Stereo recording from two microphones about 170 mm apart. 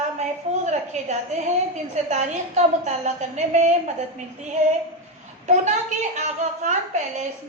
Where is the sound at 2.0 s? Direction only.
45° right (ahead or behind).